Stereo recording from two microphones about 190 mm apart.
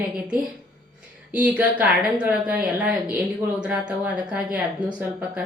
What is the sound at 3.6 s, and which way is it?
Speech, 5° right (ahead or behind).